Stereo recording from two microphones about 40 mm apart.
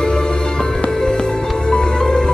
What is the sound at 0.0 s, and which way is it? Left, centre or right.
Music, centre.